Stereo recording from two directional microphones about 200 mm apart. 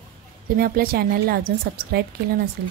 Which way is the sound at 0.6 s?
50° right (ahead or behind).